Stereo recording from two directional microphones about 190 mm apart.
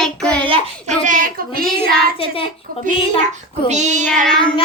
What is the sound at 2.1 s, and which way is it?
Speech, 30° left (ahead or behind).